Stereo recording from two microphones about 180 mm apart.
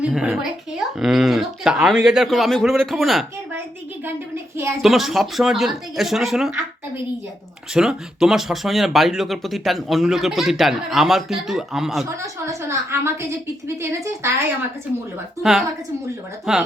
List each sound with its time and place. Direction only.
0.0 s speech: 5° right (ahead or behind)
4.8 s speech: centre (ahead or behind)
7.7 s speech: centre (ahead or behind)
12.0 s a woman's voice: 15° right (ahead or behind)
16.5 s speech: 5° right (ahead or behind)